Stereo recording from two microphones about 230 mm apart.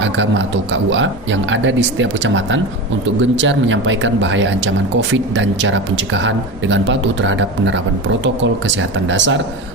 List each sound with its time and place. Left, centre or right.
0.0 s speech: right